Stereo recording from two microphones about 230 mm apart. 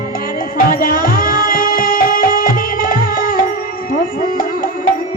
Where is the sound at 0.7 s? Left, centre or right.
Left.